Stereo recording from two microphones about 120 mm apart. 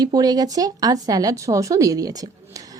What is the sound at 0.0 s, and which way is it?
Speech, 30° right (ahead or behind).